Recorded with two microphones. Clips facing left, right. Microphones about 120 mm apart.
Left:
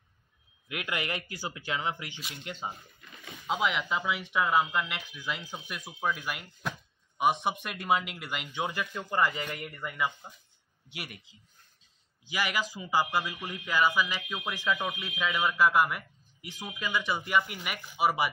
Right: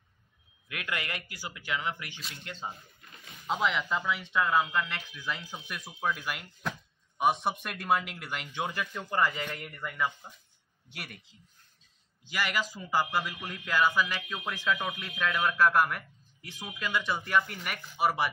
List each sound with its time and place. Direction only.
0.7 s speech: 20° left (ahead or behind)
2.5 s speech: centre (ahead or behind)